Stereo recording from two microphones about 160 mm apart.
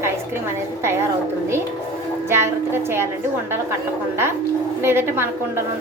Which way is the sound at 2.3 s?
15° right (ahead or behind).